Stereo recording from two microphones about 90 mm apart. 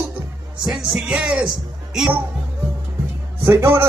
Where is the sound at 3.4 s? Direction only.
25° right (ahead or behind).